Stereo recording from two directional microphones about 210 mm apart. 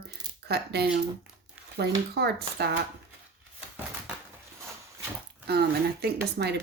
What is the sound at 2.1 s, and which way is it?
Speech, 50° right (ahead or behind).